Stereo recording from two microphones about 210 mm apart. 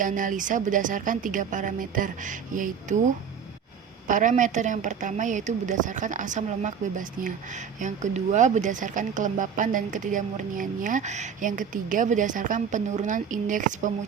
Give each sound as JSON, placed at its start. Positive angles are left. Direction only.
{"t": 0.0, "sound": "a woman's voice", "side_deg": -40}
{"t": 4.0, "sound": "a woman's voice", "side_deg": -35}